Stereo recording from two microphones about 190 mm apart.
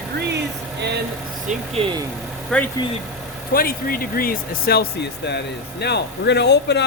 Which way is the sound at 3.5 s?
50° left (ahead or behind).